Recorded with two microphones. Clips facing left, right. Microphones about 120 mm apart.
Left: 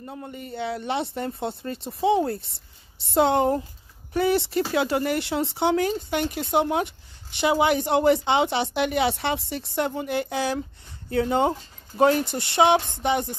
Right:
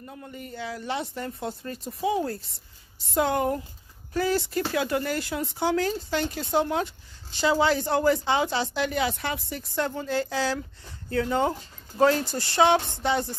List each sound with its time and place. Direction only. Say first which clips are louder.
0.0 s speech: left 4 dB; 30° left (ahead or behind)
2.4 s speech: left 1 dB; 70° left (ahead or behind)
3.2 s speech: left 4 dB; 25° left (ahead or behind)
12.9 s a sound: left 2 dB; 15° left (ahead or behind)